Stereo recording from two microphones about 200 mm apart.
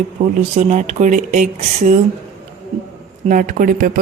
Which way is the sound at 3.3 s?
40° right (ahead or behind).